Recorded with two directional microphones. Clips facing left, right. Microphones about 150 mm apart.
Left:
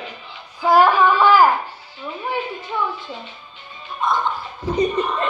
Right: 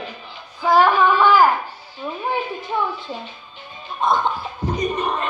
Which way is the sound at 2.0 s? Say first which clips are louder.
Right 2 dB; 20° right (ahead or behind).